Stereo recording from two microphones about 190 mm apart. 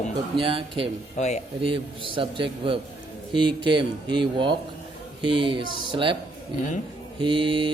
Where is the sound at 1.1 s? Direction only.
35° left (ahead or behind).